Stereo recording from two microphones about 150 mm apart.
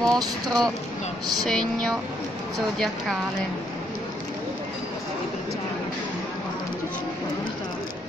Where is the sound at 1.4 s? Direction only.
5° left (ahead or behind).